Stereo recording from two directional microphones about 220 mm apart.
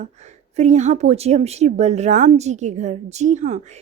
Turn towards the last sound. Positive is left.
turn(degrees=-30)  # may be behind; listen again after turning